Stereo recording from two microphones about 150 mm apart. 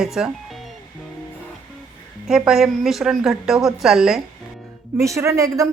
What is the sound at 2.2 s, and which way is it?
Speech, 5° right (ahead or behind).